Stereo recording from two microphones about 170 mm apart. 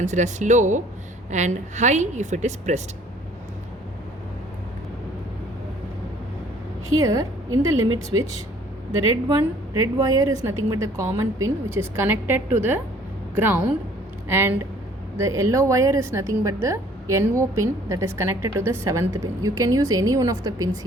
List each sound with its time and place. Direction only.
0.0 s a woman's voice: 45° right (ahead or behind)
7.0 s a woman's voice: 20° right (ahead or behind)